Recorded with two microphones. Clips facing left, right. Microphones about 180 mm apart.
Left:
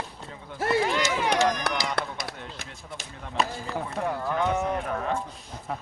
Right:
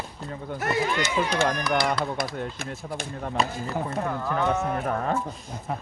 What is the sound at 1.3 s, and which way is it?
Speech, 55° right (ahead or behind).